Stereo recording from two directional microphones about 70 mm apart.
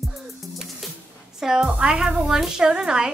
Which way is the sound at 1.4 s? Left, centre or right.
Centre.